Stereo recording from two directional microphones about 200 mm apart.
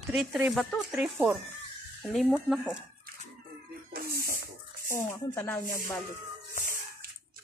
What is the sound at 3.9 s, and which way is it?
Music, 50° right (ahead or behind).